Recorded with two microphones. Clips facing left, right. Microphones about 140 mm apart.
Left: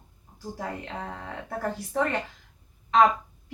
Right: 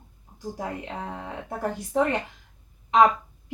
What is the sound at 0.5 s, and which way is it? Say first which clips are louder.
A woman's voice: right 1 dB; 15° right (ahead or behind).